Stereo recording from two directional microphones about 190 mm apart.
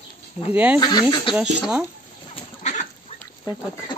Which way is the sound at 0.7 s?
20° left (ahead or behind).